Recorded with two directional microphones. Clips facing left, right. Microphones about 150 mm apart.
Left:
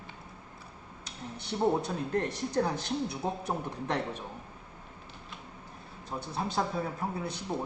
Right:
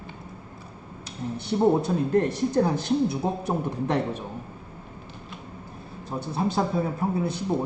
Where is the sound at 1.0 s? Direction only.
5° right (ahead or behind).